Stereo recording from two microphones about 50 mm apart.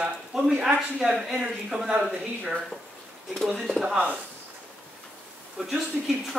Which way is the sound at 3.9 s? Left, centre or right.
Right.